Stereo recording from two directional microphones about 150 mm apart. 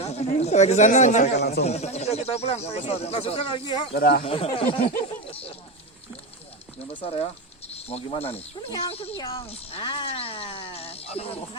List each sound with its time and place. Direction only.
0.0 s speech: 45° left (ahead or behind)
1.4 s speech: 90° left
1.6 s speech: 45° left (ahead or behind)
3.9 s speech: 90° left
4.2 s speech: 40° left (ahead or behind)
6.9 s speech: 40° left (ahead or behind)